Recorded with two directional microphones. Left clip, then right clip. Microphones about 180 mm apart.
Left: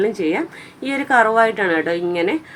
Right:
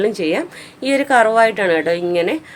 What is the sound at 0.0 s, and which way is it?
A woman's voice, 25° right (ahead or behind).